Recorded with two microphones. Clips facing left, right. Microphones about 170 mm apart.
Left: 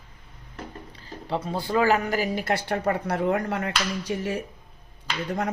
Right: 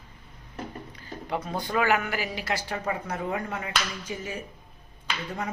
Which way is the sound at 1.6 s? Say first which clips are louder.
Left 4 dB; 30° left (ahead or behind).